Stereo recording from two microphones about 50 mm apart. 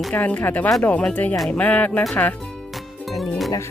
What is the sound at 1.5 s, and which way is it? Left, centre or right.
Speech, left.